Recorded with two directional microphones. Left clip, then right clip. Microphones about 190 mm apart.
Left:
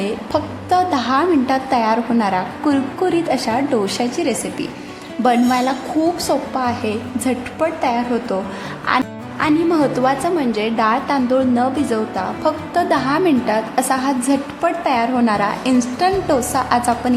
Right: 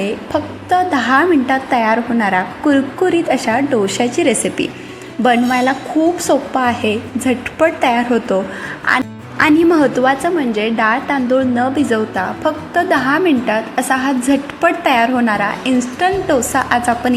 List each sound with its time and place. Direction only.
0.0 s a woman's voice: centre (ahead or behind)
9.4 s a woman's voice: 15° right (ahead or behind)